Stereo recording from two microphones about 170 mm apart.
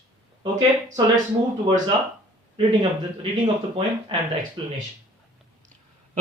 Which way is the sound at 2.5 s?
30° right (ahead or behind).